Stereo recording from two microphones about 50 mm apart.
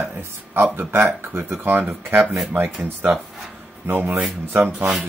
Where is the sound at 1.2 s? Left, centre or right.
Right.